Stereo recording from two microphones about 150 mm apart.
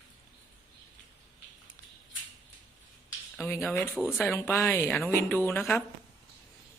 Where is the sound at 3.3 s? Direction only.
15° left (ahead or behind).